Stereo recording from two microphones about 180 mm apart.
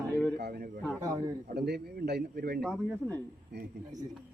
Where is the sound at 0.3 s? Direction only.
65° right (ahead or behind).